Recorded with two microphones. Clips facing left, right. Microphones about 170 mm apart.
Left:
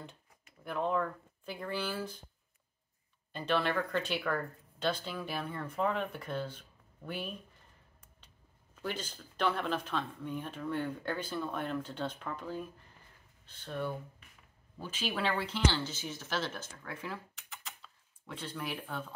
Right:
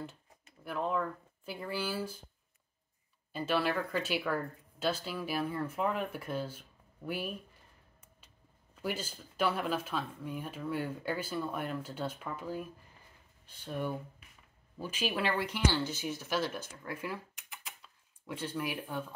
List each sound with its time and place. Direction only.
0.7 s speech: centre (ahead or behind)
3.3 s speech: 5° right (ahead or behind)
8.8 s speech: 10° right (ahead or behind)
18.3 s speech: 10° right (ahead or behind)